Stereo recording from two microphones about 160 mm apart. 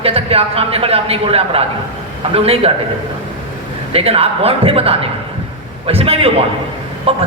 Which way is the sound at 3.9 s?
40° right (ahead or behind).